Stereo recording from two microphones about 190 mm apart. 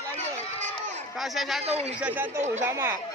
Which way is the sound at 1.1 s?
Centre (ahead or behind).